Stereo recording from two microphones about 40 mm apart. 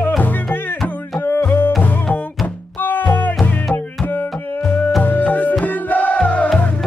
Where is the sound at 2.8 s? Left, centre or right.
Left.